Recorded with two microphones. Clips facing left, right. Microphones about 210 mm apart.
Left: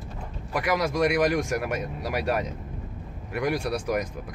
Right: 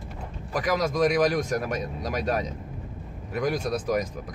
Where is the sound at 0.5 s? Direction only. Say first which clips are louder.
Even; 10° left (ahead or behind).